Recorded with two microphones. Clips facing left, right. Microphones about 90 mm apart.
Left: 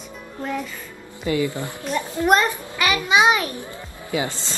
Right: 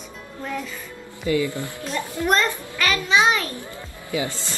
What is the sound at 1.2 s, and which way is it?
A child's voice, 25° left (ahead or behind).